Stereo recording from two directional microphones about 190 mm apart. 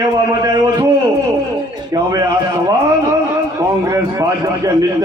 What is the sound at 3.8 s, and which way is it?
Speech, 15° right (ahead or behind).